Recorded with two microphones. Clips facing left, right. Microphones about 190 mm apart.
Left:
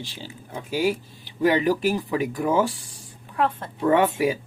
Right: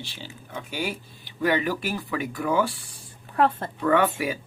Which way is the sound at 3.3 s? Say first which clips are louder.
Right 2 dB; 40° right (ahead or behind).